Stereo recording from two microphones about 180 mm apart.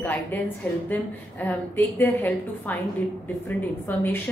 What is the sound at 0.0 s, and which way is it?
Speech, 10° left (ahead or behind).